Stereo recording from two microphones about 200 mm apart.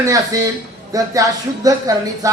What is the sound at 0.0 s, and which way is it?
Speech, 15° right (ahead or behind).